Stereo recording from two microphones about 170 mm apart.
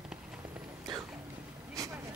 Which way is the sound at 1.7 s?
20° right (ahead or behind).